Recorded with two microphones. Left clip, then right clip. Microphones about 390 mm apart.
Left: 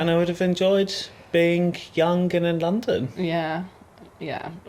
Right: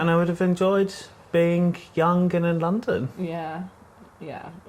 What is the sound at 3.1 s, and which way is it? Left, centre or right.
Speech, left.